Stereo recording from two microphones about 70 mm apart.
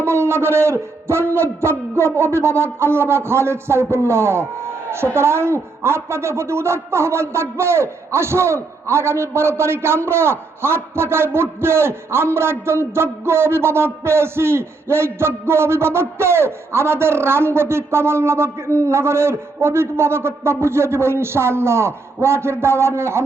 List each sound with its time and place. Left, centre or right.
0.0 s a man's voice: right